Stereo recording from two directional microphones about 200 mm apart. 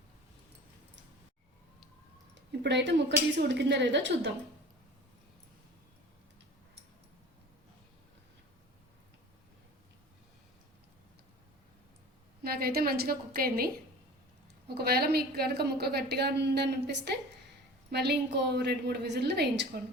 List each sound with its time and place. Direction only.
2.5 s a woman's voice: 60° right (ahead or behind)
12.4 s a woman's voice: 50° right (ahead or behind)
14.8 s a woman's voice: 50° right (ahead or behind)